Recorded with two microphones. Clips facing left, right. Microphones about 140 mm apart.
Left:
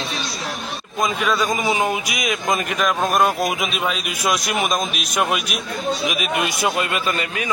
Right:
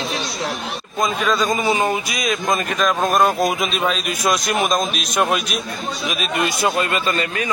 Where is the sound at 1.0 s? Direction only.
10° left (ahead or behind).